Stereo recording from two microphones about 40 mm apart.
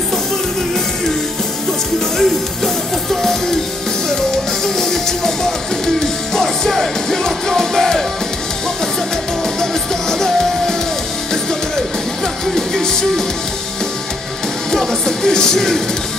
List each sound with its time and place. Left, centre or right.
2.1 s music: centre
4.6 s music: centre
9.6 s music: centre
12.5 s music: centre
14.7 s music: centre